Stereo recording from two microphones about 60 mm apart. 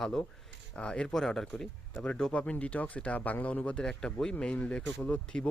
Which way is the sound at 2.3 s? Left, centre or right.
Left.